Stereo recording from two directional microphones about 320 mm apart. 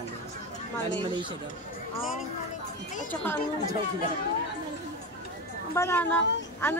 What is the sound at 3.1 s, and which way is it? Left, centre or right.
Speech, centre.